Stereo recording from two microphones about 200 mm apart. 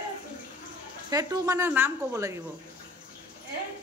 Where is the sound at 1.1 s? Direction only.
15° right (ahead or behind).